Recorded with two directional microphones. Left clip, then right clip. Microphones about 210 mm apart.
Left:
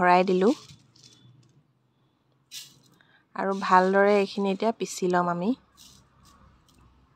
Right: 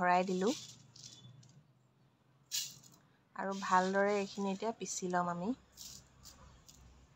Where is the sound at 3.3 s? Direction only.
35° left (ahead or behind).